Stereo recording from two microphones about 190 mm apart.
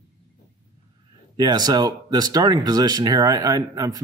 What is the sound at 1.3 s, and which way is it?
Speech, 20° right (ahead or behind).